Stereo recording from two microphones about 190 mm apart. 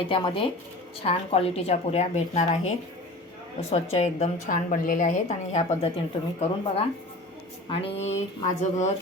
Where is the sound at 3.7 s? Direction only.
35° left (ahead or behind).